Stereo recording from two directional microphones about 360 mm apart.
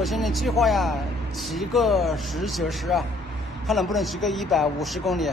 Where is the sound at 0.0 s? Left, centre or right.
Centre.